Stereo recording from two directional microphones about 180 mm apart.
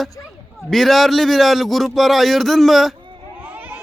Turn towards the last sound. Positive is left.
turn(degrees=-10)  # may be behind; listen again after turning